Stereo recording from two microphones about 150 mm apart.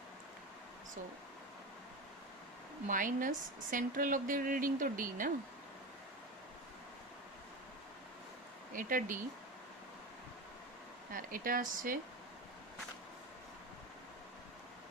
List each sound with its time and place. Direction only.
2.8 s a woman's voice: 65° right (ahead or behind)
8.7 s speech: 65° right (ahead or behind)
11.1 s speech: 70° right (ahead or behind)